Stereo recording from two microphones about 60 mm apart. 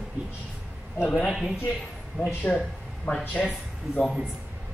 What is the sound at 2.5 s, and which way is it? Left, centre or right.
A man's voice, centre.